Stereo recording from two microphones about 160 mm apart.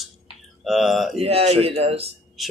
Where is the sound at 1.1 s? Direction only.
40° right (ahead or behind).